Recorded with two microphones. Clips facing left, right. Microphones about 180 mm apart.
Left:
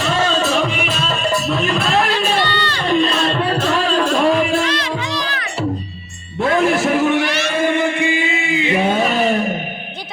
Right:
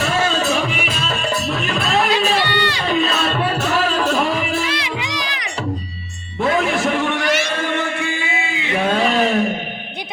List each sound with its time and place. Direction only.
1.5 s music: centre (ahead or behind)
2.4 s a sound: 10° right (ahead or behind)
4.2 s music: centre (ahead or behind)
6.6 s music: centre (ahead or behind)
7.6 s music: 15° left (ahead or behind)
8.9 s a sound: centre (ahead or behind)